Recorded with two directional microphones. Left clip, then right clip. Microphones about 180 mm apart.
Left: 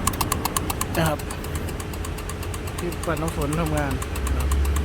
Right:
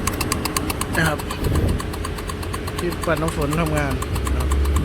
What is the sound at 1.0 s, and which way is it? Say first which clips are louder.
Speech: right 3 dB; 15° left (ahead or behind).